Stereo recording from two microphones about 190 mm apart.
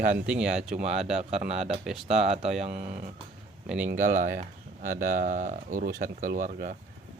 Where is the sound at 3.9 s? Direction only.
45° right (ahead or behind).